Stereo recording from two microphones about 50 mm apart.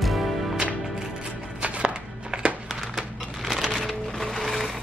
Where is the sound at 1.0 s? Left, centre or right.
Centre.